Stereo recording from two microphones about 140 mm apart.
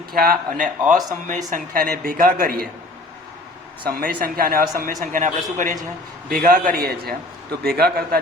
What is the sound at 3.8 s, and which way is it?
Speech, 90° right.